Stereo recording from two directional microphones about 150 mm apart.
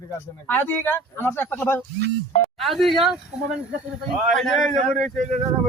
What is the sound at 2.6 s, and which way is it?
Speech, centre (ahead or behind).